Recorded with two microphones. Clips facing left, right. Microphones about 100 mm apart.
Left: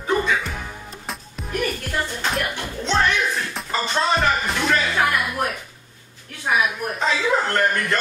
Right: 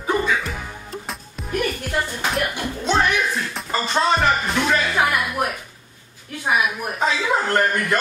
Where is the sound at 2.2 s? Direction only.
5° right (ahead or behind).